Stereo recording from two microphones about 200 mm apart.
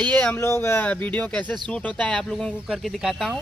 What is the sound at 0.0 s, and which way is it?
Speech, 5° left (ahead or behind).